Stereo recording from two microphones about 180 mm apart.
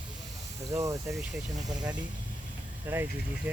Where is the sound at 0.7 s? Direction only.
20° right (ahead or behind).